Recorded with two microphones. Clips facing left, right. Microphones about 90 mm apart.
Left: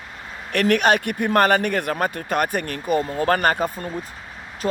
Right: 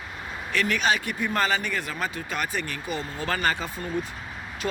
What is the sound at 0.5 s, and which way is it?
Speech, 60° left (ahead or behind).